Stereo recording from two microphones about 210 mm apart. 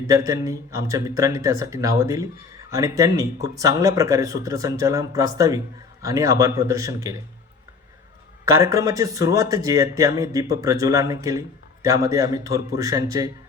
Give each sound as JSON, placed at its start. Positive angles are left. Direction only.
{"t": 0.1, "sound": "speech", "side_deg": -15}
{"t": 8.4, "sound": "speech", "side_deg": -15}